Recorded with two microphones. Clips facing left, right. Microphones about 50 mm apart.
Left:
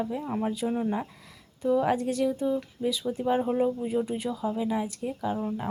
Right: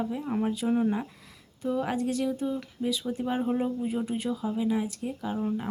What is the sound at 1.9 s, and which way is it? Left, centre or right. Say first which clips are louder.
Speech: left 2 dB; left.